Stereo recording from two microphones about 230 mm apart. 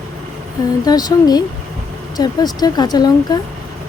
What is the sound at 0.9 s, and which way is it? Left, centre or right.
Speech, centre.